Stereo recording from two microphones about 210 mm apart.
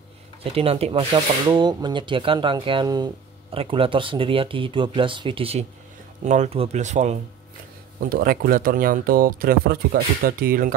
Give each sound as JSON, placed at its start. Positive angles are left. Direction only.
{"t": 0.4, "sound": "speech", "side_deg": -25}
{"t": 8.1, "sound": "speech", "side_deg": -45}